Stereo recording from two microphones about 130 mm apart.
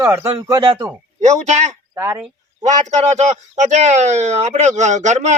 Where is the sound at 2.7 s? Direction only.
65° right (ahead or behind).